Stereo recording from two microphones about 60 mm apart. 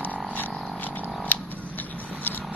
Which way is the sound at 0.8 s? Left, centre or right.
Left.